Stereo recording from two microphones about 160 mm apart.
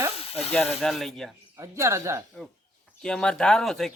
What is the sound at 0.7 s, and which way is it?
Speech, centre (ahead or behind).